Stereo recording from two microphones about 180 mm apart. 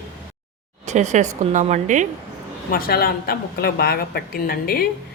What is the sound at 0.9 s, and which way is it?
A woman's voice, 40° right (ahead or behind).